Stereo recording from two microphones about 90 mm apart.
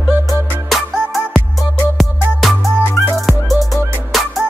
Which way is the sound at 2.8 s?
30° left (ahead or behind).